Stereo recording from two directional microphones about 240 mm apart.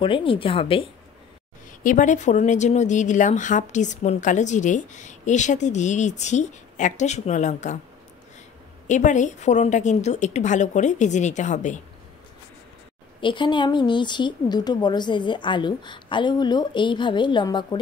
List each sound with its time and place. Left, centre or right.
0.0 s speech: left
1.8 s speech: left
8.8 s speech: left
13.2 s speech: centre